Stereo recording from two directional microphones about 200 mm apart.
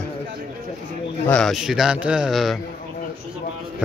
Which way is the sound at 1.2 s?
5° left (ahead or behind).